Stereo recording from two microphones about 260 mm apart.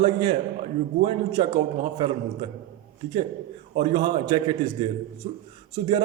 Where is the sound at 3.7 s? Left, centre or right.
Centre.